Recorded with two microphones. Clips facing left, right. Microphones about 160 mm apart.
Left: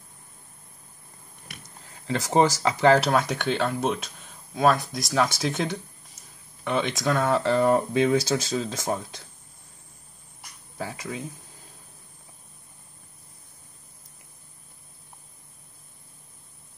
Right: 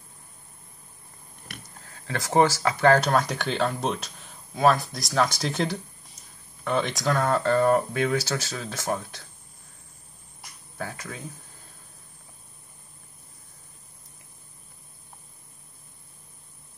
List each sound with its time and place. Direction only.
1.9 s speech: 15° left (ahead or behind)
2.8 s speech: 10° left (ahead or behind)
10.8 s speech: 15° left (ahead or behind)